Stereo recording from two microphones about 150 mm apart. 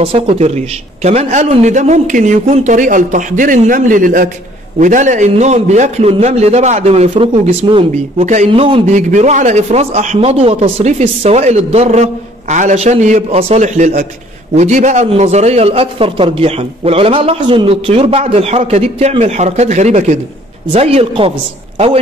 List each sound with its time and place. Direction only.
0.0 s a man's voice: 40° right (ahead or behind)
8.9 s a man's voice: 55° right (ahead or behind)